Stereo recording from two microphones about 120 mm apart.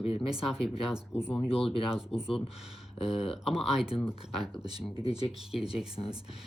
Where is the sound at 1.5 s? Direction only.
50° left (ahead or behind).